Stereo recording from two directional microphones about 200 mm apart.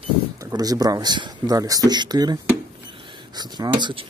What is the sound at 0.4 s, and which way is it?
Speech, 20° right (ahead or behind).